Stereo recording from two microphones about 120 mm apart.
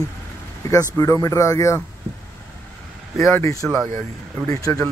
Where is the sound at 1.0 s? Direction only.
25° left (ahead or behind).